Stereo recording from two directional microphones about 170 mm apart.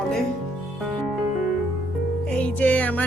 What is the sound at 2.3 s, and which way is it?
Music, 5° left (ahead or behind).